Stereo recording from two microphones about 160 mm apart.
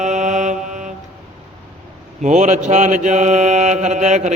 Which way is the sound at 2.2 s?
50° right (ahead or behind).